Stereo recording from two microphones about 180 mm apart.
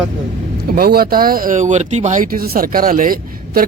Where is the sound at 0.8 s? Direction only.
55° right (ahead or behind).